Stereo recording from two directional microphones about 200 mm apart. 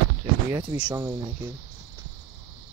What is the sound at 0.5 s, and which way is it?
Speech, 20° right (ahead or behind).